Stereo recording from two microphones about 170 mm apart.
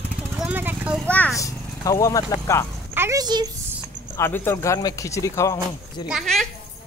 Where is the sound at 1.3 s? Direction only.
20° left (ahead or behind).